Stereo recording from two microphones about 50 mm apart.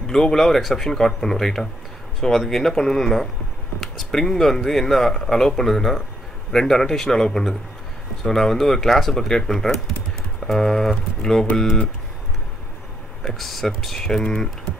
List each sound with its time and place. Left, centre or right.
0.0 s speech: centre
13.2 s speech: centre